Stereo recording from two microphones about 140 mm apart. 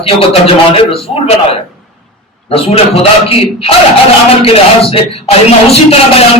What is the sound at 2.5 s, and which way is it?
Speech, 45° left (ahead or behind).